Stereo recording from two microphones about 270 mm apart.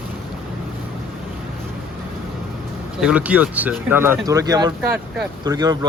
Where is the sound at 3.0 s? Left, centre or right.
Centre.